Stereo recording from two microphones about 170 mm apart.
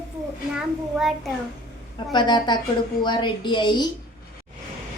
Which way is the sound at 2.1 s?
25° left (ahead or behind).